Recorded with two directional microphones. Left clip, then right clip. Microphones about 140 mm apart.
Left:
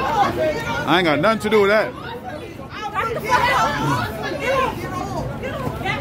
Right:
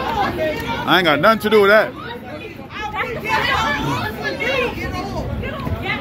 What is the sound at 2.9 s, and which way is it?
Chatter, 35° left (ahead or behind).